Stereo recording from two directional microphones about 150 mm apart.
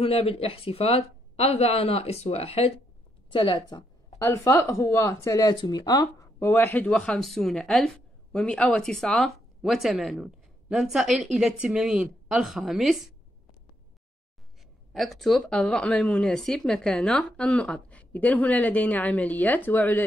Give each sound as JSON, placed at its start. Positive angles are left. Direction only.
{"t": 0.0, "sound": "speech", "side_deg": 40}
{"t": 4.2, "sound": "speech", "side_deg": 20}
{"t": 14.9, "sound": "speech", "side_deg": 0}